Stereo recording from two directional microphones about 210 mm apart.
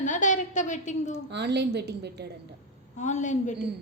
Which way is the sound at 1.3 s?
55° right (ahead or behind).